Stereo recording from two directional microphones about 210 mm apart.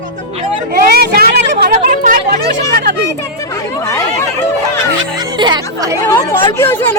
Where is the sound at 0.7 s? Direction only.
45° right (ahead or behind).